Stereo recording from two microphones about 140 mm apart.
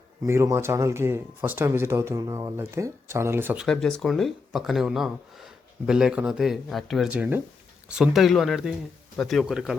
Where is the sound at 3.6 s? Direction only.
5° left (ahead or behind).